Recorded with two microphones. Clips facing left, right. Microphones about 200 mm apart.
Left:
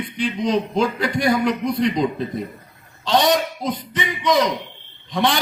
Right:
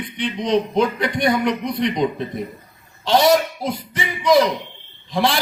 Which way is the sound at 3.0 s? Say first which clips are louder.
Right 3 dB; 25° right (ahead or behind).